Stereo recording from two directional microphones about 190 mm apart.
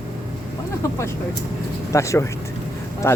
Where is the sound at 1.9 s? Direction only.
15° left (ahead or behind).